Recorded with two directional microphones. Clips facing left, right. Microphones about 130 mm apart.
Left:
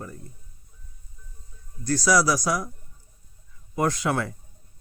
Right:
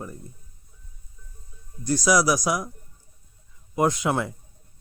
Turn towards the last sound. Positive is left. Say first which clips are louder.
# right 2 dB
turn(degrees=-20)  # may be behind; listen again after turning